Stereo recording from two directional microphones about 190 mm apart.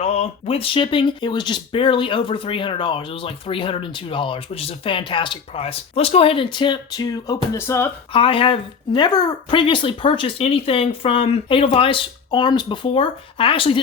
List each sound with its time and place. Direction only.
0.0 s speech: 30° left (ahead or behind); by 7.9 s 15° left (ahead or behind)
8.1 s speech: 30° left (ahead or behind)